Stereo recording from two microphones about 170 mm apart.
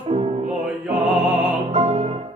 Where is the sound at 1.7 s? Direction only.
35° right (ahead or behind).